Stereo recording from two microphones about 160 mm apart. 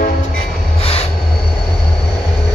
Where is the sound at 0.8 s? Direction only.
35° left (ahead or behind).